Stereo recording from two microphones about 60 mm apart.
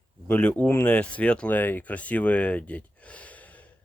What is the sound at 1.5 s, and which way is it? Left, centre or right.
Speech, left.